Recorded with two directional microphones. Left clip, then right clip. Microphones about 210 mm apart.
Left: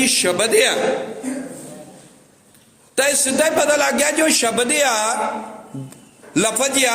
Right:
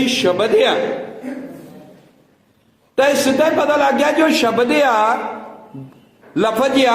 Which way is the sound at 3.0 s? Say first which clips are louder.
Right 4 dB; 45° left (ahead or behind).